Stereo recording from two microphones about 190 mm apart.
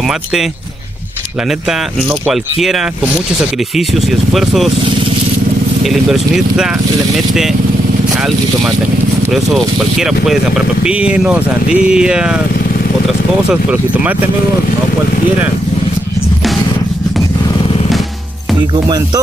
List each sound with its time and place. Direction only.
0.0 s speech: centre (ahead or behind)
1.5 s speech: centre (ahead or behind)
5.9 s speech: centre (ahead or behind)
9.2 s speech: centre (ahead or behind)
13.5 s speech: 5° right (ahead or behind)
18.7 s music: 20° right (ahead or behind)